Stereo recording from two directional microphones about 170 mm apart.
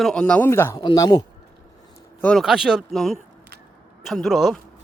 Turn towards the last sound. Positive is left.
turn(degrees=0)  # may be behind; listen again after turning